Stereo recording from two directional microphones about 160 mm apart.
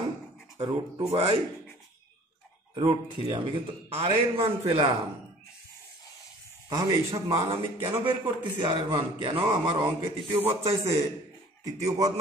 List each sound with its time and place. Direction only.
0.6 s a man's voice: 25° right (ahead or behind)
1.1 s a man's voice: 40° right (ahead or behind)
2.7 s a man's voice: 35° right (ahead or behind)
6.7 s a man's voice: 25° right (ahead or behind)
10.7 s a man's voice: 20° right (ahead or behind)